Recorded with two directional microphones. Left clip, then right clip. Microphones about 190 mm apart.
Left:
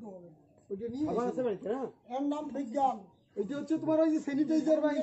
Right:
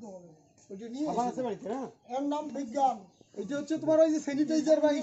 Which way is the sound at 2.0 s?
5° left (ahead or behind).